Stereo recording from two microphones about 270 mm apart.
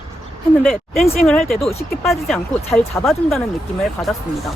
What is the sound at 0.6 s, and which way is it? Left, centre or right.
Speech, centre.